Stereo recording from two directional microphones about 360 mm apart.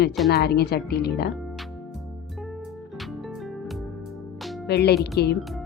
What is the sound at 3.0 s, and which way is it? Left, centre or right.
Music, centre.